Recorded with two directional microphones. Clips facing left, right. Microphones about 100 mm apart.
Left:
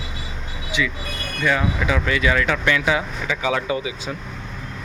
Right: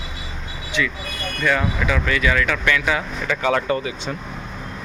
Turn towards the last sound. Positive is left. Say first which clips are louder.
# right 2 dB
turn(degrees=10)  # may be behind; listen again after turning